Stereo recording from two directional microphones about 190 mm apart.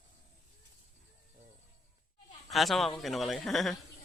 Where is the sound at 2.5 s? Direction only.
Centre (ahead or behind).